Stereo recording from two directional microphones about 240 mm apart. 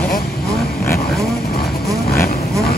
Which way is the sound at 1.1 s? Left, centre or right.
Centre.